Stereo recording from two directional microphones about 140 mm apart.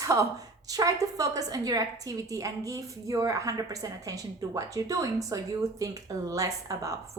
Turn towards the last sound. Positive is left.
turn(degrees=-25)  # may be behind; listen again after turning